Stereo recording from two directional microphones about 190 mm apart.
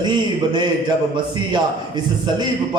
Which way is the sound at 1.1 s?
20° right (ahead or behind).